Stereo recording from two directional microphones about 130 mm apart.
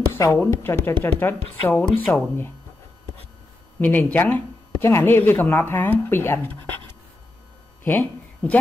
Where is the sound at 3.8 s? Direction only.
15° left (ahead or behind).